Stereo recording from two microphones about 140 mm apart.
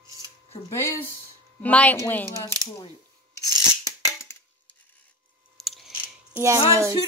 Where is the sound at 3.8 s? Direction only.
20° left (ahead or behind).